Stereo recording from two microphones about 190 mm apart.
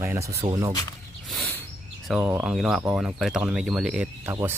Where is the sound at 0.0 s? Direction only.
15° right (ahead or behind).